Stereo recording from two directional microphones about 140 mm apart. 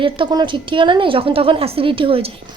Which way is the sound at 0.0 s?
35° right (ahead or behind).